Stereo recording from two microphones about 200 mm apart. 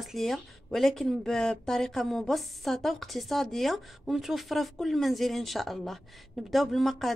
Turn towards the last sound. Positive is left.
turn(degrees=0)  # may be behind; listen again after turning